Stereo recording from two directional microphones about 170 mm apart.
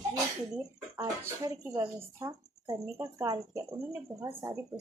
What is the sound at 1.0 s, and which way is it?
Speech, 20° right (ahead or behind).